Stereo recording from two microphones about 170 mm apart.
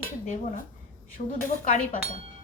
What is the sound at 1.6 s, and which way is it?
Speech, 50° left (ahead or behind).